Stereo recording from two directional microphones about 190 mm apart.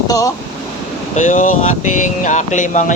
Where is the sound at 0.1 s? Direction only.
20° left (ahead or behind).